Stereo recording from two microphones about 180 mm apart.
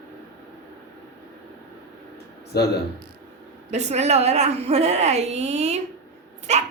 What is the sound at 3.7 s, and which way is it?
A woman's voice, 40° right (ahead or behind).